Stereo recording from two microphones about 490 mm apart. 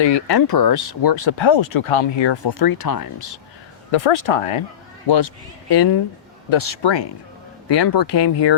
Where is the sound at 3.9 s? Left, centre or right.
Left.